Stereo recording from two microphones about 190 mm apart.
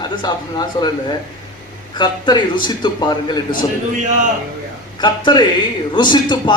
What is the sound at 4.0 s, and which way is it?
Speech, 40° right (ahead or behind).